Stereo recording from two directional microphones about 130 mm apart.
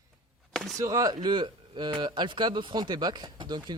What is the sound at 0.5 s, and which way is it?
Chop, 5° left (ahead or behind).